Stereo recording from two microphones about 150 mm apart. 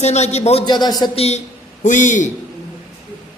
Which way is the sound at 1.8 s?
55° left (ahead or behind).